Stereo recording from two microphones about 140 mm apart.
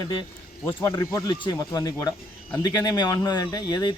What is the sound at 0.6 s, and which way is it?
Speech, 15° left (ahead or behind).